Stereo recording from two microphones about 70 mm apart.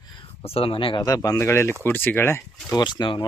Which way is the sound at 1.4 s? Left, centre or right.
Left.